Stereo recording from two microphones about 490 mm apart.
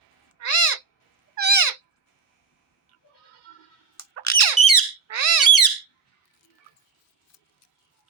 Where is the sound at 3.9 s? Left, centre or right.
Left.